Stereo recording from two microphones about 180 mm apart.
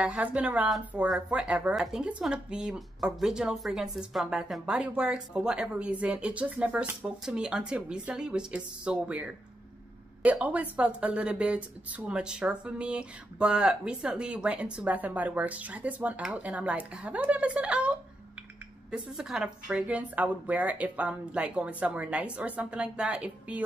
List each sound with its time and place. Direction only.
0.0 s speech: 5° right (ahead or behind)